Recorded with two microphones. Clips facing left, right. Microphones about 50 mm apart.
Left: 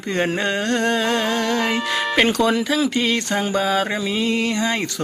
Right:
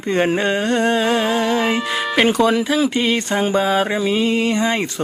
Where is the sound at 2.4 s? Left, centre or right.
Centre.